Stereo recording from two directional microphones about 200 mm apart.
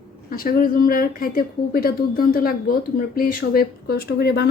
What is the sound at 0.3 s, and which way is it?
Speech, 45° left (ahead or behind).